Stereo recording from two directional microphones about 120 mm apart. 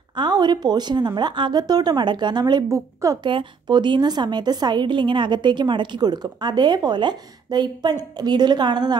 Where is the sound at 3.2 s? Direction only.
40° right (ahead or behind).